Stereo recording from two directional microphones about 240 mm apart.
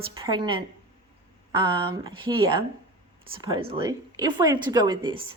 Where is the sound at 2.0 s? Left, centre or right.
Centre.